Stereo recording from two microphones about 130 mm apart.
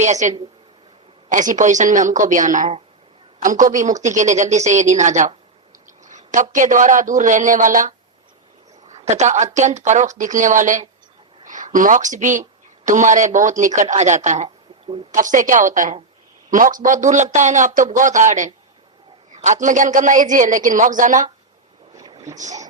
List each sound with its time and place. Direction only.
0.0 s speech: 65° right (ahead or behind)
1.3 s a man's voice: 80° right
8.9 s a woman's voice: 60° right (ahead or behind)
15.1 s a woman's voice: 80° right
21.9 s boat: 25° right (ahead or behind)